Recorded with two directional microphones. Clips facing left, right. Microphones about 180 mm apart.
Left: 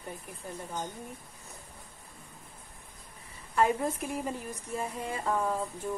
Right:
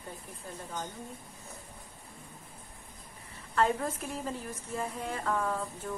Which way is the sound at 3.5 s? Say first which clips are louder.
Left 2 dB; 15° left (ahead or behind).